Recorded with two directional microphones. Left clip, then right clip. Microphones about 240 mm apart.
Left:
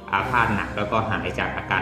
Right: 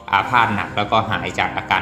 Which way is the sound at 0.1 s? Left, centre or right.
Centre.